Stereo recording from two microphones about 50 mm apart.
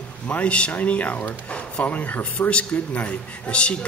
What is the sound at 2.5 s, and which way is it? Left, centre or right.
A man's voice, left.